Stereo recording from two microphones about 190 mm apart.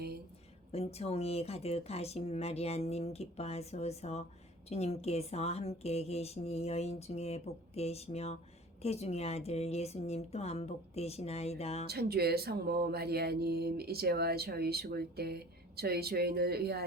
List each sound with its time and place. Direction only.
0.7 s speech: 35° left (ahead or behind)
11.9 s speech: 55° right (ahead or behind)